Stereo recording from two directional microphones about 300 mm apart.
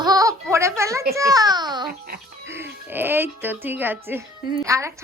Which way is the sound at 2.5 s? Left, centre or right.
Centre.